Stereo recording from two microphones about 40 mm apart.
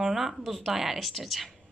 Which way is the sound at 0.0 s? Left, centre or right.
Centre.